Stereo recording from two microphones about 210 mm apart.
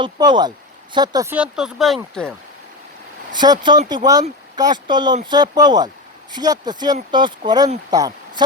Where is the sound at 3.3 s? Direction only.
20° right (ahead or behind).